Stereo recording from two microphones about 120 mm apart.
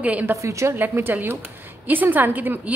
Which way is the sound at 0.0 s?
10° right (ahead or behind).